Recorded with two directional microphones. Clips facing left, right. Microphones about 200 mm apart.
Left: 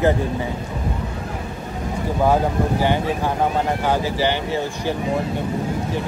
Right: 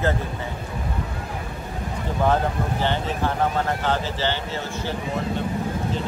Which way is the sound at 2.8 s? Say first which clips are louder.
Left 4 dB; 10° left (ahead or behind).